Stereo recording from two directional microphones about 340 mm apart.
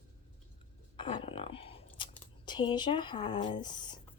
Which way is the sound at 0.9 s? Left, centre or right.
Centre.